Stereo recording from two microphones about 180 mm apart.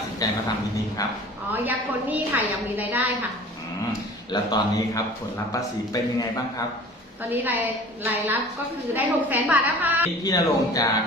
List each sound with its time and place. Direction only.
0.2 s a man's voice: 20° left (ahead or behind)
1.5 s a woman's voice: 10° right (ahead or behind)
4.3 s a man's voice: 25° left (ahead or behind)
7.3 s a woman's voice: 10° right (ahead or behind)
10.2 s a man's voice: 20° left (ahead or behind)